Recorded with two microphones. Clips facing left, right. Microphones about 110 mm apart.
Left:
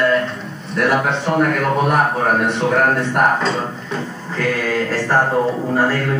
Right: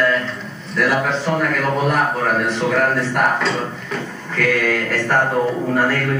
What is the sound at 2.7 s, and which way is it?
Speech, 40° left (ahead or behind).